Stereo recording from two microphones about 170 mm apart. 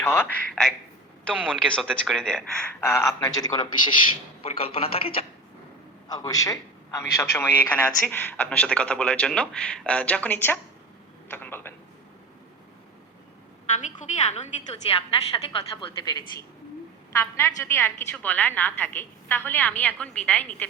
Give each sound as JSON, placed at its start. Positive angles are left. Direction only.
{"t": 0.0, "sound": "a man's voice", "side_deg": 15}
{"t": 2.8, "sound": "a man's voice", "side_deg": 15}
{"t": 4.4, "sound": "speech", "side_deg": 35}
{"t": 6.1, "sound": "a man's voice", "side_deg": 20}
{"t": 13.7, "sound": "a woman's voice", "side_deg": 45}
{"t": 15.4, "sound": "a man's voice", "side_deg": 25}
{"t": 17.1, "sound": "a man's voice", "side_deg": 15}